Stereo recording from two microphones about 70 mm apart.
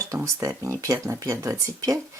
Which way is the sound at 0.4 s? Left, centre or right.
Right.